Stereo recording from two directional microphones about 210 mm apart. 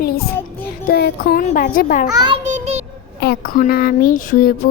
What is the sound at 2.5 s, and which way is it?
Child singing, 30° right (ahead or behind).